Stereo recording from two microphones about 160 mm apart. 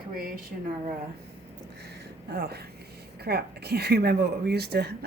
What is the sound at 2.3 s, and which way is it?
Speech, 80° right.